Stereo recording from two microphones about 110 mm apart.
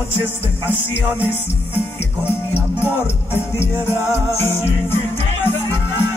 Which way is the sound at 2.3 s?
20° left (ahead or behind).